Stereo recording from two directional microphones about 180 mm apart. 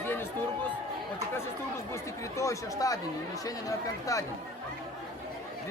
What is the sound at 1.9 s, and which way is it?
Speech, 15° left (ahead or behind).